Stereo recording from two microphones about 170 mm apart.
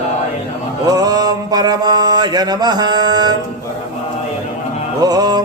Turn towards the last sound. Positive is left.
turn(degrees=-25)  # may be behind; listen again after turning